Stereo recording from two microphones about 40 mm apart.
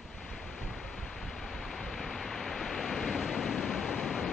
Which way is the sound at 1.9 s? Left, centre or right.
Centre.